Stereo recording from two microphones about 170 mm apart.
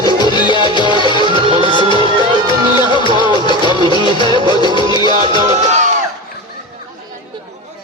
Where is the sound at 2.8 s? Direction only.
25° left (ahead or behind).